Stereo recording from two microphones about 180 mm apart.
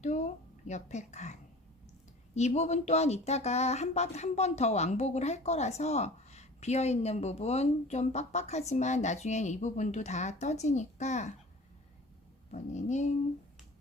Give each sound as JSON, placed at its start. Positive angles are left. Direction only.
{"t": 0.0, "sound": "speech", "side_deg": 40}
{"t": 12.5, "sound": "speech", "side_deg": 40}